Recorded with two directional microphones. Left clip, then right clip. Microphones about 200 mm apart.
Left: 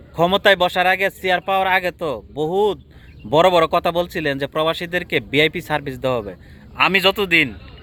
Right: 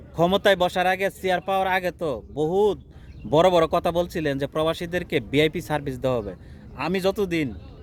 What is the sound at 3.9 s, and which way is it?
A man's voice, 5° right (ahead or behind).